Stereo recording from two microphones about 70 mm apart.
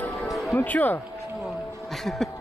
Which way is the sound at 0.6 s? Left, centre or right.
Left.